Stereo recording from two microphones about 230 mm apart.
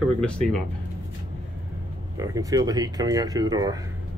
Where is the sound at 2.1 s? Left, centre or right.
Centre.